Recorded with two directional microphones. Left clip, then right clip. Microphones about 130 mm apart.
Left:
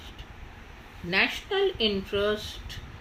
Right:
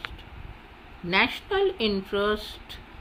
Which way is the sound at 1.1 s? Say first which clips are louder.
Right 2 dB; 35° right (ahead or behind).